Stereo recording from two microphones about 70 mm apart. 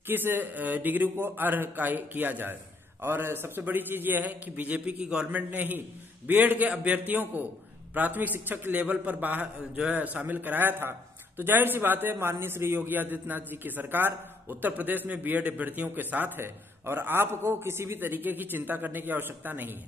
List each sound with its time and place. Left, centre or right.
0.0 s a man's voice: right; by 5.4 s centre
5.5 s a man's voice: right